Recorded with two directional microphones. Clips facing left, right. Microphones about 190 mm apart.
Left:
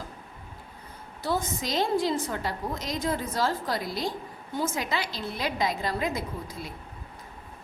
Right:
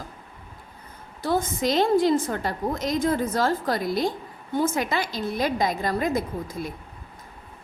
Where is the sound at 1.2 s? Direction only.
50° right (ahead or behind).